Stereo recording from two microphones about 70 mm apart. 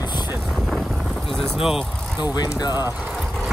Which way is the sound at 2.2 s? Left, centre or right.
Left.